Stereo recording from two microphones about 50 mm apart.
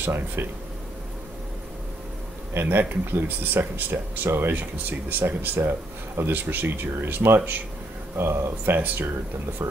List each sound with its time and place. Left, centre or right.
0.0 s speech: right
2.5 s speech: right
5.6 s speech: right
8.2 s speech: right
9.6 s speech: right